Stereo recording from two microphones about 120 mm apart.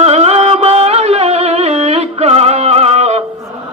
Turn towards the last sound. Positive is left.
turn(degrees=-65)  # may be behind; listen again after turning